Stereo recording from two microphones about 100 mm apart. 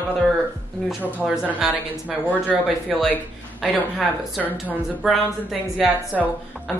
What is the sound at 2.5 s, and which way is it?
Speech, centre (ahead or behind).